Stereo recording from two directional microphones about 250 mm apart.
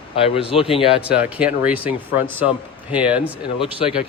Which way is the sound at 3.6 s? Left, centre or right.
Left.